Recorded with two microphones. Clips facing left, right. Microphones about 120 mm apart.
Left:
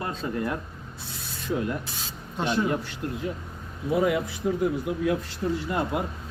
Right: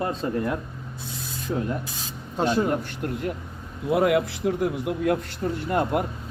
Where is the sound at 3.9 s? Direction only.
70° right (ahead or behind).